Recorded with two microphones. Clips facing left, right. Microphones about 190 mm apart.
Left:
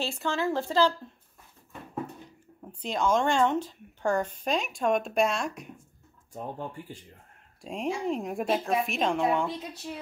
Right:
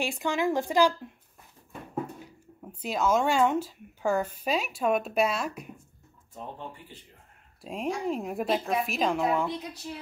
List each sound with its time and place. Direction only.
0.0 s speech: 15° right (ahead or behind)
1.7 s a sound: 10° right (ahead or behind)
2.8 s a woman's voice: 5° right (ahead or behind)
7.6 s a woman's voice: centre (ahead or behind)